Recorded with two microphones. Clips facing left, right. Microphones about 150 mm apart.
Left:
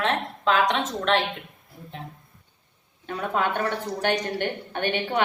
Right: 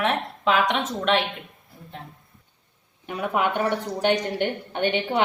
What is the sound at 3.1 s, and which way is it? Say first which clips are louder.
Speech: right 1 dB; 15° right (ahead or behind).